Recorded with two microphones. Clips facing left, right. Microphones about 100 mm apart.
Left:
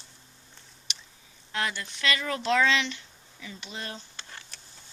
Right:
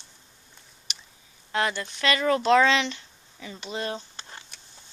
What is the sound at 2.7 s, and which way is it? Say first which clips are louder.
Speech: right 3 dB; 30° right (ahead or behind).